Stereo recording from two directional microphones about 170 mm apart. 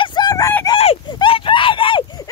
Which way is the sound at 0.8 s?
30° left (ahead or behind).